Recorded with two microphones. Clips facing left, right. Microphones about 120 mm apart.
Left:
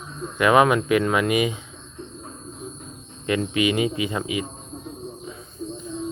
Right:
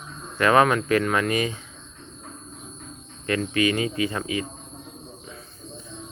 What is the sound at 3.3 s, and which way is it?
Speech, 15° left (ahead or behind).